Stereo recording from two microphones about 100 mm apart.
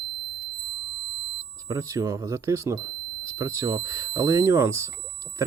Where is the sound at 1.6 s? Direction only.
35° right (ahead or behind).